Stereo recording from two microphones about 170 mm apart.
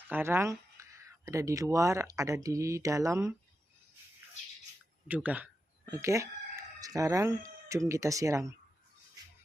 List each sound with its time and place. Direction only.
0.1 s speech: 15° right (ahead or behind)
5.0 s speech: 10° right (ahead or behind)